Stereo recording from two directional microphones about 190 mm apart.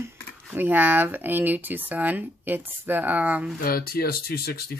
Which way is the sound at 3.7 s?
50° left (ahead or behind).